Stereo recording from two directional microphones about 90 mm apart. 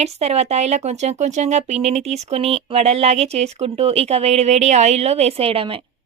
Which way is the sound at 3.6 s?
90° right.